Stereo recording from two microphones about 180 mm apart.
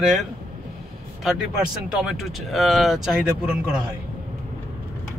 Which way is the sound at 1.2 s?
5° right (ahead or behind).